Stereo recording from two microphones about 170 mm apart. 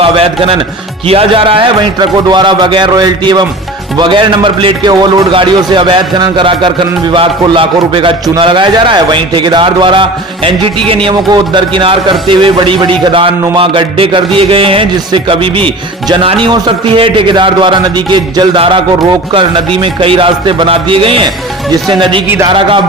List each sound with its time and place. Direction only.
0.0 s a man's voice: 35° right (ahead or behind)